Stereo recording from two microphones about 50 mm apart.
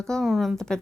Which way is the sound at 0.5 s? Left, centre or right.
Centre.